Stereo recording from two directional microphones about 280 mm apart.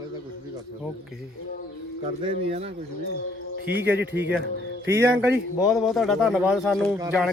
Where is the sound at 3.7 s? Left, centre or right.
Right.